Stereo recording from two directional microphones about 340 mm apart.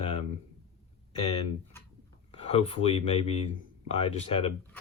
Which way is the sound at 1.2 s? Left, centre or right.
Centre.